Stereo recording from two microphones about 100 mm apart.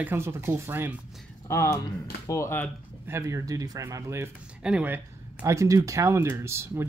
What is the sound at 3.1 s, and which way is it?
Speech, 30° right (ahead or behind).